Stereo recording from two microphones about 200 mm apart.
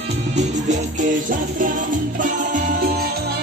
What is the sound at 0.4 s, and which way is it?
Music, 40° right (ahead or behind).